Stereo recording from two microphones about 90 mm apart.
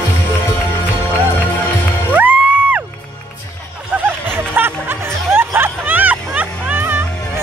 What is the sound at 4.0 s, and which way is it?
Music, 25° right (ahead or behind).